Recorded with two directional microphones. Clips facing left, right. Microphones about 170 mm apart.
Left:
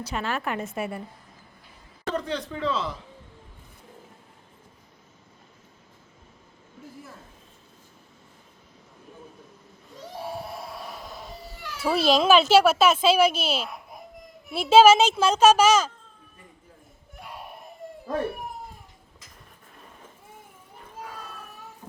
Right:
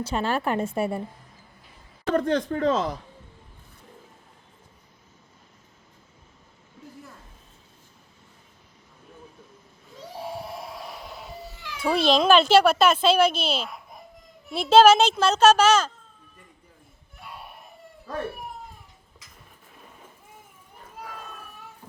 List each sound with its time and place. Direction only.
0.0 s speech: 30° right (ahead or behind)
2.1 s speech: 50° right (ahead or behind)
11.7 s speech: 5° left (ahead or behind)